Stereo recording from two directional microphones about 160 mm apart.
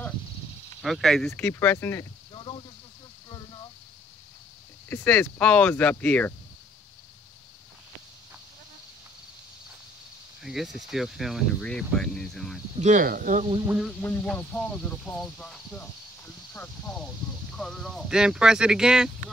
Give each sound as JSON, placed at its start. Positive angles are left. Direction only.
{"t": 0.8, "sound": "speech", "side_deg": 0}
{"t": 1.4, "sound": "speech", "side_deg": 15}
{"t": 2.3, "sound": "snake", "side_deg": 30}
{"t": 4.8, "sound": "speech", "side_deg": 10}
{"t": 10.4, "sound": "speech", "side_deg": 0}
{"t": 12.7, "sound": "speech", "side_deg": -50}
{"t": 13.7, "sound": "speech", "side_deg": -5}
{"t": 14.0, "sound": "speech", "side_deg": 10}